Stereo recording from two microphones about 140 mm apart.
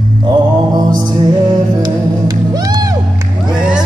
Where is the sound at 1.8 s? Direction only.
30° right (ahead or behind).